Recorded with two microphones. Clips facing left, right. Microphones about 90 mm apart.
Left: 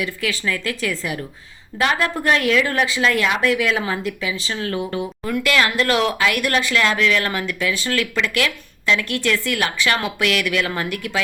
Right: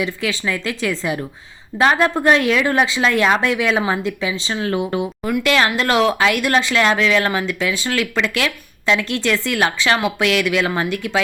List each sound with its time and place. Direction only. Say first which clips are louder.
0.0 s speech: right 2 dB; 25° right (ahead or behind)